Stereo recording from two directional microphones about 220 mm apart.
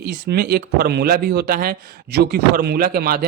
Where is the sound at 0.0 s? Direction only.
45° right (ahead or behind).